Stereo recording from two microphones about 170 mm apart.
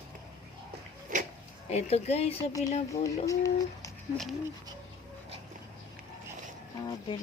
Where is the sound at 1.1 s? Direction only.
55° right (ahead or behind).